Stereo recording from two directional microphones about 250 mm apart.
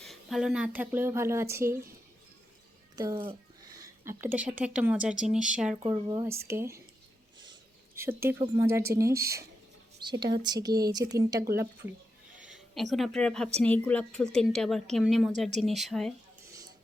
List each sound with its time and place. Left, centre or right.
0.0 s speech: centre
2.9 s a child's voice: centre
5.7 s speech: centre
8.2 s a woman's voice: centre
16.5 s music: centre